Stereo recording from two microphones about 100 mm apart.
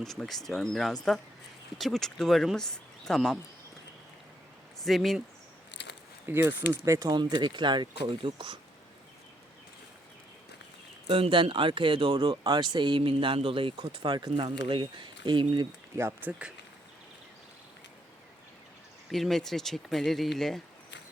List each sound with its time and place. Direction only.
0.0 s speech: 5° left (ahead or behind)
4.8 s speech: centre (ahead or behind)
6.2 s speech: 20° right (ahead or behind)
7.1 s speech: 45° right (ahead or behind)
11.1 s speech: 60° right (ahead or behind)
16.0 s speech: 25° right (ahead or behind)
19.1 s speech: 5° left (ahead or behind)